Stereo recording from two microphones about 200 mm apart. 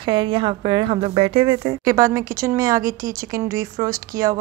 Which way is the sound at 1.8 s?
15° right (ahead or behind).